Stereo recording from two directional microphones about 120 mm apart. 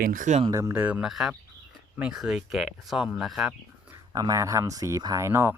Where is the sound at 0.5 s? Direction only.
20° right (ahead or behind); by 3.5 s centre (ahead or behind).